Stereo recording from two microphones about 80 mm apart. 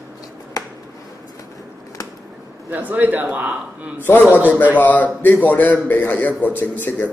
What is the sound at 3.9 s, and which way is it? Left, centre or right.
A man's voice, left.